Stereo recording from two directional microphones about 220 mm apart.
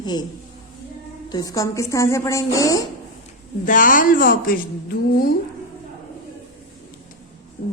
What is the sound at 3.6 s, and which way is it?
Speech, 35° left (ahead or behind).